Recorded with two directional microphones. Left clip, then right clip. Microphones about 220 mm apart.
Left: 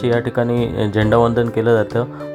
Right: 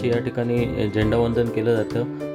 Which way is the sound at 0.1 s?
5° left (ahead or behind).